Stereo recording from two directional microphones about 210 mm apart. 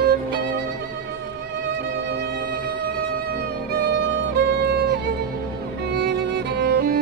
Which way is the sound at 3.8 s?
55° right (ahead or behind).